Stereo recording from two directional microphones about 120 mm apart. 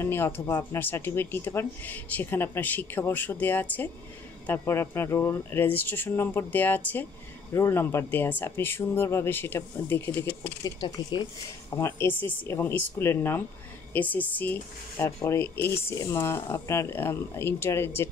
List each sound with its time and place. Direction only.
0.0 s speech: 20° left (ahead or behind)
10.6 s speech: 35° left (ahead or behind)
11.7 s speech: 20° left (ahead or behind)